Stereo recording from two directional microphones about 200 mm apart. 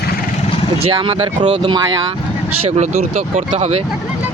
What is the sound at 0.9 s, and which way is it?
Speech, 25° right (ahead or behind).